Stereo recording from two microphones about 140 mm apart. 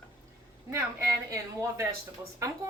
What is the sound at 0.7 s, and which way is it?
A woman's voice, 20° right (ahead or behind).